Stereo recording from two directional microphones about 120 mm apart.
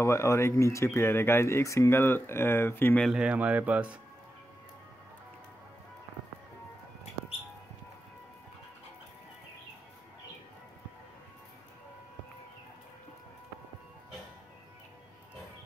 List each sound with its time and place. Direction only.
0.0 s speech: 25° left (ahead or behind)
3.0 s speech: 5° right (ahead or behind)